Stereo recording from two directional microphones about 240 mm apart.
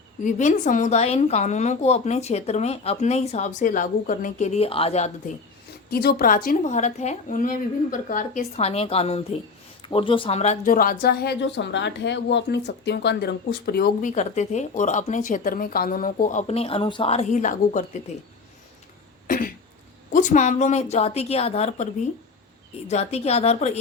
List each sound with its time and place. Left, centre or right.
0.3 s a woman's voice: left
5.9 s a woman's voice: left
19.3 s cough: left
20.1 s a woman's voice: left
22.9 s a woman's voice: left